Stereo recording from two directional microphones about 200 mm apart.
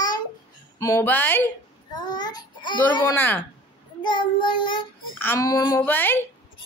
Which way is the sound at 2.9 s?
15° left (ahead or behind).